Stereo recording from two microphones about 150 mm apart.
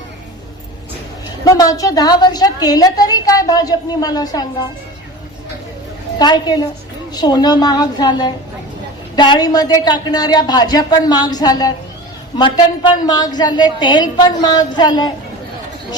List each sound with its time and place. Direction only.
1.5 s a woman's voice: 25° left (ahead or behind)
6.1 s a woman's voice: 30° left (ahead or behind)